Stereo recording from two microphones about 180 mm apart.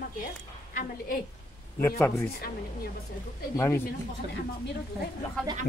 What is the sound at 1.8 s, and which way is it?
Speech, 15° left (ahead or behind).